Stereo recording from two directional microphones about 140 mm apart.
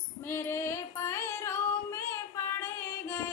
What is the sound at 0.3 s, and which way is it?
Singing, 20° left (ahead or behind).